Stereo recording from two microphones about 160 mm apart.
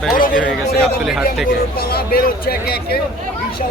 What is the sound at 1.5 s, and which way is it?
Speech, 70° left (ahead or behind).